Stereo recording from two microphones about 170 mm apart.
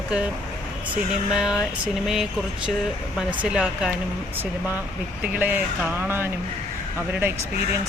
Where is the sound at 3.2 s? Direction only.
5° right (ahead or behind).